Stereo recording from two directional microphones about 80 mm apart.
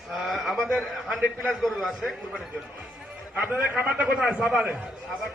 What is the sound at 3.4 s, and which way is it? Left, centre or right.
Speech, centre.